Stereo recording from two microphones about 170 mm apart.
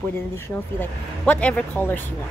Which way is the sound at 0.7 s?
10° left (ahead or behind).